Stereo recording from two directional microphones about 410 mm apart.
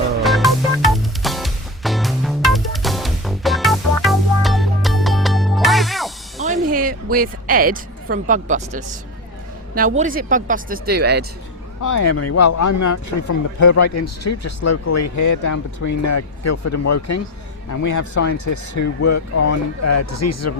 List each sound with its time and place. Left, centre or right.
0.2 s music: centre
6.4 s a sound: centre
9.7 s speech: centre
11.8 s speech: left